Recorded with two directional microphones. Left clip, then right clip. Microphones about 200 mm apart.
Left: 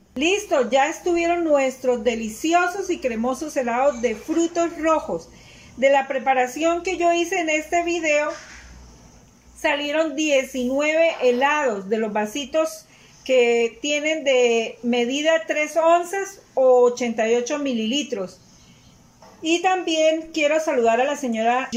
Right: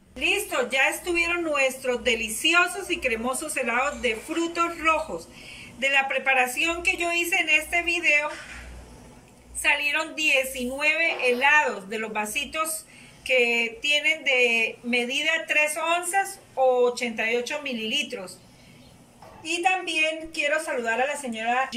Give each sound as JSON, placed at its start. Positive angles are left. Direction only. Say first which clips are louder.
{"t": 0.2, "sound": "a woman's voice", "louder": "left 5 dB", "side_deg": 35}
{"t": 9.6, "sound": "a woman's voice", "louder": "left 2 dB", "side_deg": 35}
{"t": 19.4, "sound": "a woman's voice", "louder": "left 4 dB", "side_deg": 30}